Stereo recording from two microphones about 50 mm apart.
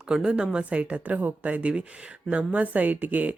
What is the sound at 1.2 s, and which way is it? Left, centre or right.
Speech, right.